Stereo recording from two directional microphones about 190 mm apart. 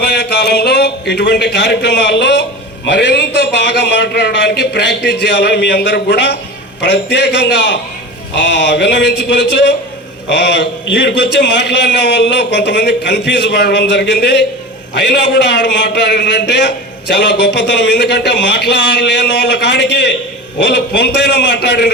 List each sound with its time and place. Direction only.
0.0 s a man's voice: 60° left (ahead or behind)